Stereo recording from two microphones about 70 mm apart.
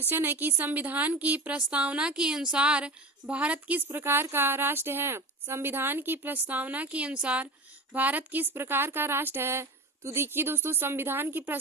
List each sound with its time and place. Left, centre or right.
0.1 s a woman's voice: right